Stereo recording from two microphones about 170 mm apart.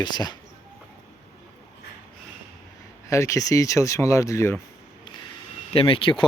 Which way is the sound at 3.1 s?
15° left (ahead or behind).